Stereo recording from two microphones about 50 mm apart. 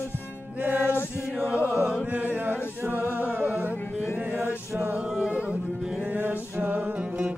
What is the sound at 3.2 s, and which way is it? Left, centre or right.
Music, right.